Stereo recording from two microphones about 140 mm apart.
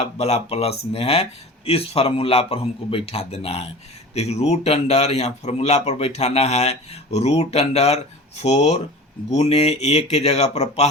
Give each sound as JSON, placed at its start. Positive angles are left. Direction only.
{"t": 0.0, "sound": "speech", "side_deg": 50}